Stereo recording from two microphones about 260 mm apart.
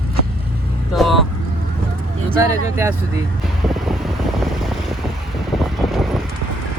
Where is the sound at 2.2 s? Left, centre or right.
Centre.